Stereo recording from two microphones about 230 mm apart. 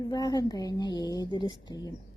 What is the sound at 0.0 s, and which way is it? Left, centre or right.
Speech, centre.